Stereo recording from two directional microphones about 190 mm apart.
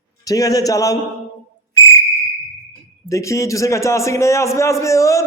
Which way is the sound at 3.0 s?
15° left (ahead or behind).